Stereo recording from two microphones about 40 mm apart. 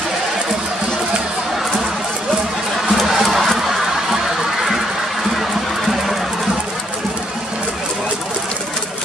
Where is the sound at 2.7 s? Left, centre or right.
Centre.